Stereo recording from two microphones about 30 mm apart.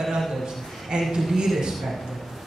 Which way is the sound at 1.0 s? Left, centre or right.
Centre.